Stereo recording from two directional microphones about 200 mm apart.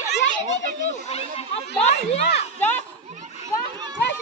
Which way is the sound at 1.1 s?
30° left (ahead or behind).